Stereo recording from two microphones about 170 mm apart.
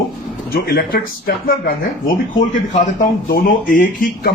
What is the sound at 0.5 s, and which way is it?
Speech, 65° left (ahead or behind).